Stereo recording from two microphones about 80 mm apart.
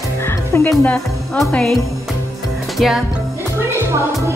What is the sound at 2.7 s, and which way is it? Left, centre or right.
Speech, centre.